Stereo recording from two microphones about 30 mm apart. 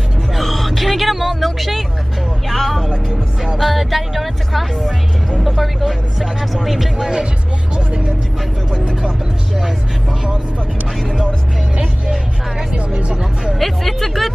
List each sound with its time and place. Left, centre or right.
0.4 s a sound: centre
2.5 s vehicle: centre
2.9 s music: right
3.5 s speech: centre
7.0 s speech: right
7.7 s speech: right
13.6 s speech: centre